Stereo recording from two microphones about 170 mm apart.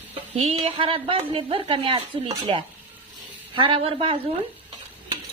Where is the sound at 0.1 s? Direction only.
35° right (ahead or behind).